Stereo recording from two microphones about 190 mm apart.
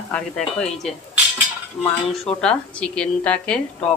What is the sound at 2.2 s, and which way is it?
Speech, 5° left (ahead or behind).